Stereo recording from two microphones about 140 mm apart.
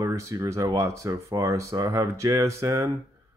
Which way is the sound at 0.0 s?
20° right (ahead or behind).